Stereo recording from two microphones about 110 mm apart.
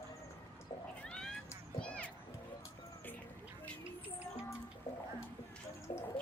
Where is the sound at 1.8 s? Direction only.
10° left (ahead or behind).